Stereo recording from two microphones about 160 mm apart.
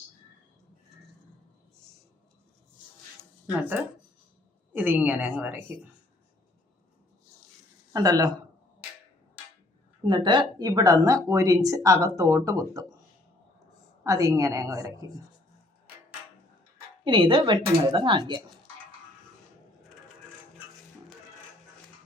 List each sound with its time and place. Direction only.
4.7 s a woman's voice: 10° right (ahead or behind)
7.9 s speech: 25° right (ahead or behind)
10.1 s speech: 30° right (ahead or behind)
14.0 s speech: 20° right (ahead or behind)
17.0 s speech: 30° right (ahead or behind)